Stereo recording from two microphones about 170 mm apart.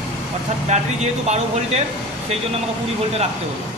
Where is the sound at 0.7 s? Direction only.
40° right (ahead or behind).